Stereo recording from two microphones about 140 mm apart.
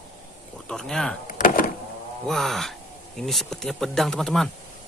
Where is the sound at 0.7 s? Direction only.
5° left (ahead or behind).